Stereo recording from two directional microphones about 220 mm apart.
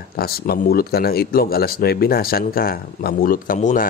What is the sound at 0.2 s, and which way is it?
Speech, 45° left (ahead or behind).